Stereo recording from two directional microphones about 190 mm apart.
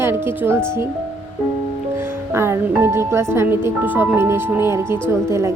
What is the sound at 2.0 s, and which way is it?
Speech, 15° right (ahead or behind).